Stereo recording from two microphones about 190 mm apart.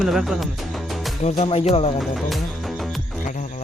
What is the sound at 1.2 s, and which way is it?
Speech, 35° left (ahead or behind).